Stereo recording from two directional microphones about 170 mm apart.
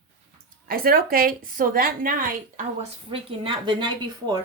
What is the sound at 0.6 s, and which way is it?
A woman's voice, 60° right (ahead or behind).